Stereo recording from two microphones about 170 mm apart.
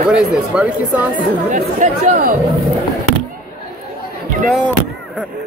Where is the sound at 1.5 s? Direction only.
50° right (ahead or behind).